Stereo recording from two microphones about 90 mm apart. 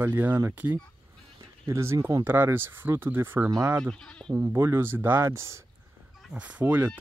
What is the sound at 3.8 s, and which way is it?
Speech, 5° left (ahead or behind).